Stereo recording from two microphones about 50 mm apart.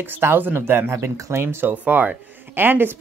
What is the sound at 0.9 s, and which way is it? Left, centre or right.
Speech, right.